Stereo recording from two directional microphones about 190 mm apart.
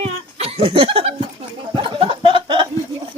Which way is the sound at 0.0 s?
30° right (ahead or behind).